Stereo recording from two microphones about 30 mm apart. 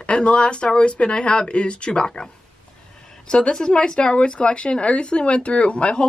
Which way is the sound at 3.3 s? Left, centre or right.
Left.